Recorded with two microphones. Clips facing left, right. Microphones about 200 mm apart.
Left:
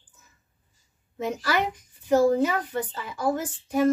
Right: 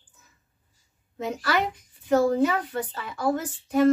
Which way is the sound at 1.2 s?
5° left (ahead or behind).